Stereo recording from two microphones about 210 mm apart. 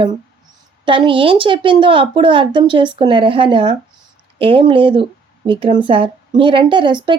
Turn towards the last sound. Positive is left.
turn(degrees=-20)  # may be behind; listen again after turning